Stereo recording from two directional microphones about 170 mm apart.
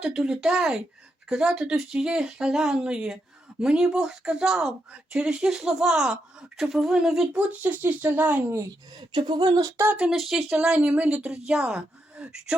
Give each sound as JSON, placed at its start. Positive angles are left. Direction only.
{"t": 0.0, "sound": "speech", "side_deg": -5}
{"t": 9.1, "sound": "speech", "side_deg": -25}